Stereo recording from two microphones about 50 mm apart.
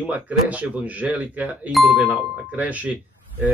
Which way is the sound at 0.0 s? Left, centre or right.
Right.